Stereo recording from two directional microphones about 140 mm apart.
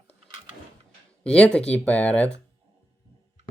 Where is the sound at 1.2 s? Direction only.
5° left (ahead or behind).